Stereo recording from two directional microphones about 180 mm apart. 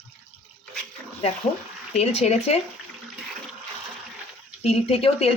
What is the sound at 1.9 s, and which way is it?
Speech, 35° left (ahead or behind).